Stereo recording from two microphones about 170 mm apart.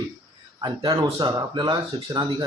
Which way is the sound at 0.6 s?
25° right (ahead or behind).